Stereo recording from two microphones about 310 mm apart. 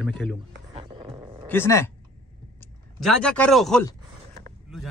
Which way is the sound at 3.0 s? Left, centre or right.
Centre.